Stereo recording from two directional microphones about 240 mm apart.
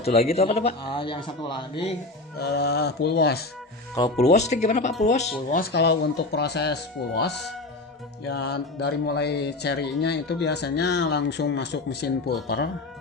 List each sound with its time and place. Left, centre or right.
0.0 s a man's voice: left
2.4 s speech: left
3.9 s a man's voice: left